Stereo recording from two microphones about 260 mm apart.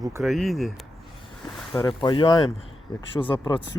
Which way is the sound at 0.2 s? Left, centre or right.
Centre.